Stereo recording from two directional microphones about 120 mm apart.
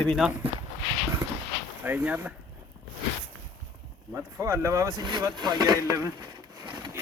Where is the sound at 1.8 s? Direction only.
15° right (ahead or behind).